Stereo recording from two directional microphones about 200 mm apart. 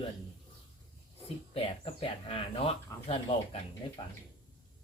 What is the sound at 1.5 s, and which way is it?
Speech, 30° left (ahead or behind).